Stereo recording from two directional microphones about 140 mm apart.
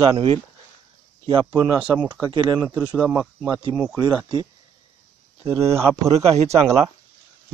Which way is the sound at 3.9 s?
30° right (ahead or behind).